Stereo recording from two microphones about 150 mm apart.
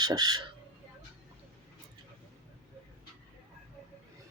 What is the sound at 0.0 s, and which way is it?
Speech, 25° right (ahead or behind).